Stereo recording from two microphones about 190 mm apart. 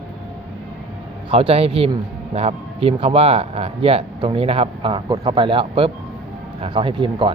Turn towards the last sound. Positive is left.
turn(degrees=-25)  # may be behind; listen again after turning